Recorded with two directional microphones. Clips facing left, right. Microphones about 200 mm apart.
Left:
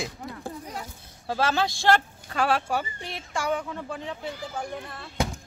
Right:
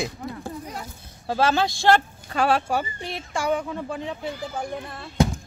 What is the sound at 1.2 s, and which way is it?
Speech, 25° right (ahead or behind).